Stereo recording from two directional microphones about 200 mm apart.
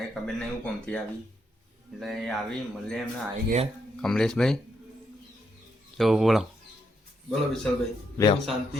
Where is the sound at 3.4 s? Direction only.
35° right (ahead or behind).